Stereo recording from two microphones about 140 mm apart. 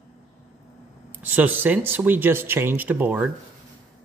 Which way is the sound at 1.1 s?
15° right (ahead or behind).